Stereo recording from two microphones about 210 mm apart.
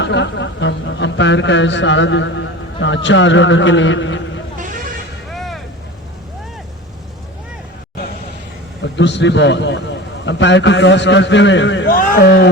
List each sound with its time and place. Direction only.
0.0 s speech: 55° left (ahead or behind)
4.5 s vehicle: 40° right (ahead or behind)
5.3 s vehicle: centre (ahead or behind)
8.8 s speech: 55° left (ahead or behind)
11.9 s speech: 40° left (ahead or behind)